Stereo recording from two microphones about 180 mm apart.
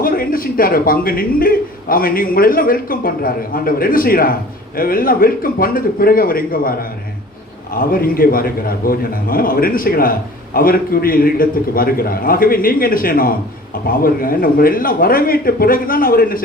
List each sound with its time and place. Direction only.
0.0 s a man's voice: 50° left (ahead or behind)